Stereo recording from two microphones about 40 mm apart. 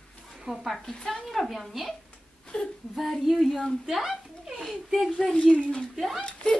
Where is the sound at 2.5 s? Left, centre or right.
Left.